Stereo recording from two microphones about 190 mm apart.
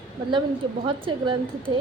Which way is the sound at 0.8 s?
25° right (ahead or behind).